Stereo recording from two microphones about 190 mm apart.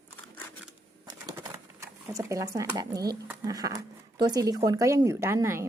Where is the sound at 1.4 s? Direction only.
15° right (ahead or behind).